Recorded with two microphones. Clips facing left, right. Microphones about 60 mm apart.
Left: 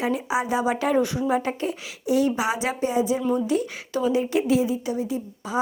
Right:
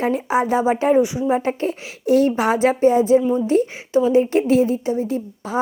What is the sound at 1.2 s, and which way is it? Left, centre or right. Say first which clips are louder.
A woman's voice: right 4 dB; right.